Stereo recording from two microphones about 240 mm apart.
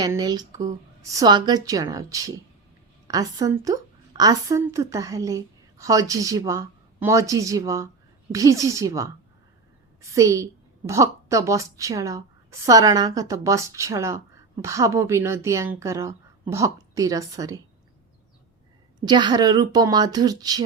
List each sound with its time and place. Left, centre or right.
0.0 s a woman's voice: centre
10.2 s a woman's voice: centre
18.9 s a woman's voice: centre